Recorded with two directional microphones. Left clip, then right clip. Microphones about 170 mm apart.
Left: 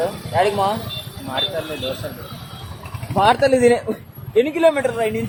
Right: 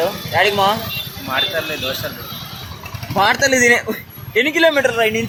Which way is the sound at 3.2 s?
10° left (ahead or behind).